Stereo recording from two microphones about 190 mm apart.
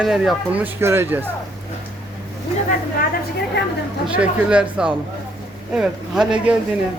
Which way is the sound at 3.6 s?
60° left (ahead or behind).